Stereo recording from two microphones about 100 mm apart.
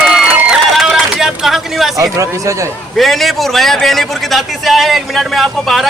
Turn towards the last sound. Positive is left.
turn(degrees=0)  # may be behind; listen again after turning